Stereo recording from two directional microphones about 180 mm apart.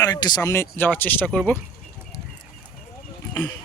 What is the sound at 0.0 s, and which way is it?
Speech, 20° left (ahead or behind).